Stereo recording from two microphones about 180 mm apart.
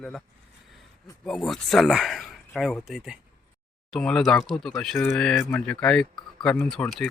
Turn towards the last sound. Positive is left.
turn(degrees=0)  # may be behind; listen again after turning